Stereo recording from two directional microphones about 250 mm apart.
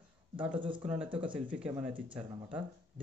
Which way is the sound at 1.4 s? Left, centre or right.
Centre.